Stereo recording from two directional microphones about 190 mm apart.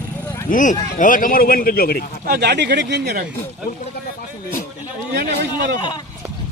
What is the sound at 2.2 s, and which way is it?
Speech, 60° right (ahead or behind).